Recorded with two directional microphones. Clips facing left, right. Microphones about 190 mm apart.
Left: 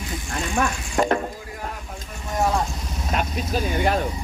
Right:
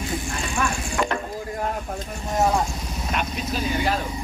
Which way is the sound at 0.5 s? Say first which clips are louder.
Left 3 dB; 35° left (ahead or behind).